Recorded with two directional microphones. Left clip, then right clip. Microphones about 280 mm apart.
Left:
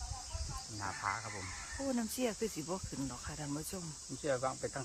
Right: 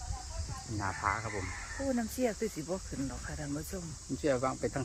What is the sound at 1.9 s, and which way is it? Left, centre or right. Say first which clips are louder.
Speech: right 3 dB; centre.